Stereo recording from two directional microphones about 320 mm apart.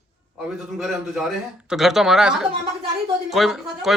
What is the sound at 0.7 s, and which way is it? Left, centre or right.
A man's voice, centre.